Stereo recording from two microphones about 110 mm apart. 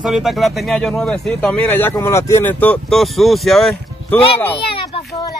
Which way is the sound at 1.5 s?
15° left (ahead or behind).